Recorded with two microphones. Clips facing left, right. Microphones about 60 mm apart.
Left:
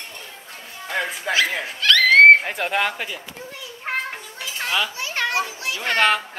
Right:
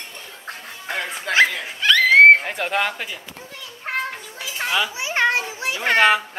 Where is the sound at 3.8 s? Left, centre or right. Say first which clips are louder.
Right 1 dB; centre.